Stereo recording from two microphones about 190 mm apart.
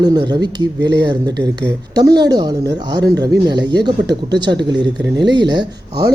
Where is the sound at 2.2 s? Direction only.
20° right (ahead or behind).